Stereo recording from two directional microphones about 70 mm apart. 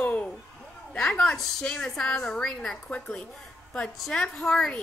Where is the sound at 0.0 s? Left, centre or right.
Left.